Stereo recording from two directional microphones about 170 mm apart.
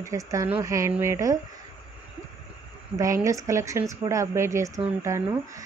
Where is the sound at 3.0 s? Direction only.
20° right (ahead or behind).